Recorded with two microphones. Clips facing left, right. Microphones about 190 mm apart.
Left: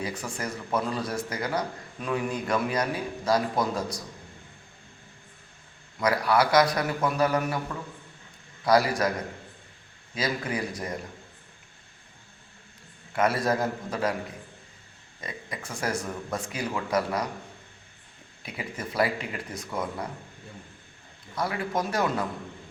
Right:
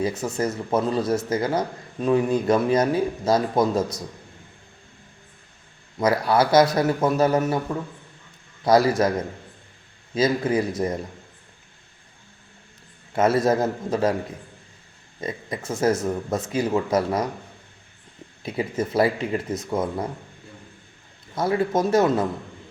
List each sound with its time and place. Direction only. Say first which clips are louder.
0.0 s speech: right 9 dB; 25° right (ahead or behind)
6.0 s speech: right 4 dB; 25° right (ahead or behind)
8.6 s speech: right 5 dB; 25° right (ahead or behind)
10.2 s speech: right 9 dB; 25° right (ahead or behind)
13.1 s speech: right 6 dB; 25° right (ahead or behind)
15.2 s speech: right 8 dB; 25° right (ahead or behind)
18.4 s speech: right 10 dB; 25° right (ahead or behind)
21.3 s speech: right 7 dB; 25° right (ahead or behind)